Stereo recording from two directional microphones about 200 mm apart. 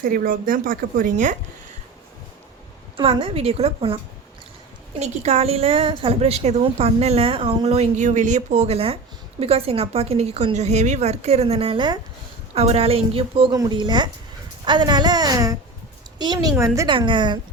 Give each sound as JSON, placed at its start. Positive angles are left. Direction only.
{"t": 0.0, "sound": "a woman's voice", "side_deg": -45}
{"t": 3.0, "sound": "a woman's voice", "side_deg": -25}